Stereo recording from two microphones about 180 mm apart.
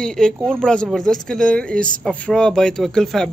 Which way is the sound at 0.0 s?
5° left (ahead or behind).